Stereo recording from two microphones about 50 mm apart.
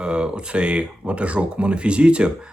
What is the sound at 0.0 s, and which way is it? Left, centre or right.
Speech, centre.